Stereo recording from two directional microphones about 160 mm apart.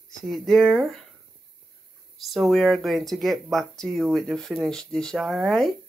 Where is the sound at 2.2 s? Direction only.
Centre (ahead or behind).